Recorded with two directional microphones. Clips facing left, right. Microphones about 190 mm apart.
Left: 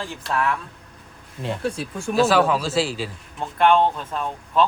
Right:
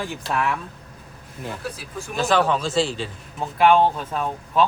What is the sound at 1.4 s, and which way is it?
Speech, 25° left (ahead or behind).